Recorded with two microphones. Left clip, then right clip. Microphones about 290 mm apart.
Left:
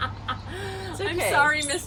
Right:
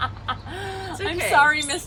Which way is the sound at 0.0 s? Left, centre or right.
Centre.